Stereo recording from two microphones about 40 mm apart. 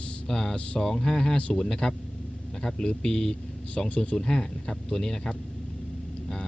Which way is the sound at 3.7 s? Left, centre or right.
Left.